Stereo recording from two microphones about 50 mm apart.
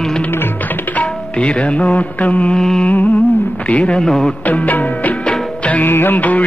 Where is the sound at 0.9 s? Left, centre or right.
Left.